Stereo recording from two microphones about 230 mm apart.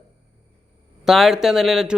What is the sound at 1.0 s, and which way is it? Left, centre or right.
Speech, centre.